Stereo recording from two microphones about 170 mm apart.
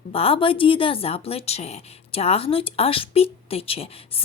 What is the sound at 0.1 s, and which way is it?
Speech, 35° left (ahead or behind).